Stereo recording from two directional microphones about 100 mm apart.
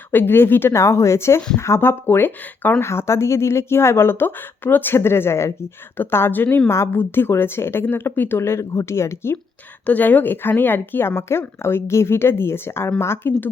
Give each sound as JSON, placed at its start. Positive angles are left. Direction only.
{"t": 0.1, "sound": "speech", "side_deg": 20}
{"t": 9.8, "sound": "speech", "side_deg": 15}